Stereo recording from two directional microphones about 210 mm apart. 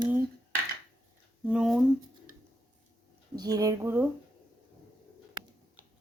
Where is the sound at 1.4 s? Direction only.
5° right (ahead or behind).